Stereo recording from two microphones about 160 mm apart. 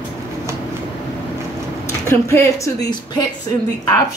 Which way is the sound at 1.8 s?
15° left (ahead or behind).